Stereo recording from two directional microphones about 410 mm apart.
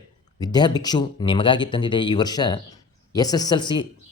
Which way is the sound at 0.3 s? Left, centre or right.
Centre.